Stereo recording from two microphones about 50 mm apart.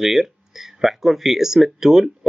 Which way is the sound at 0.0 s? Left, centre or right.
Centre.